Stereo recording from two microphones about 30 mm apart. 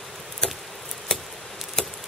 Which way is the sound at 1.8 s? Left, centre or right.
Centre.